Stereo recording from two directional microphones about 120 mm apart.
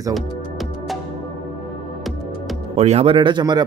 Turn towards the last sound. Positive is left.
turn(degrees=-35)  # may be behind; listen again after turning